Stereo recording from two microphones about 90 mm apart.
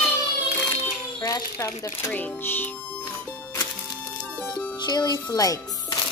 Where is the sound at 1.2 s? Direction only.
40° left (ahead or behind).